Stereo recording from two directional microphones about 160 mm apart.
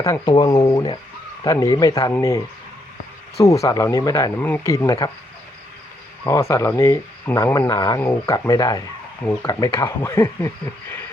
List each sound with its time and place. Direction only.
0.0 s speech: 25° left (ahead or behind)
3.6 s speech: 20° left (ahead or behind)
6.2 s speech: 20° left (ahead or behind)